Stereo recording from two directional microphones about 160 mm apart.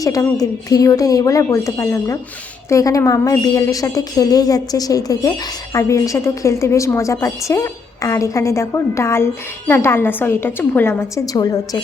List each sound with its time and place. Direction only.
0.0 s a woman's voice: 20° left (ahead or behind)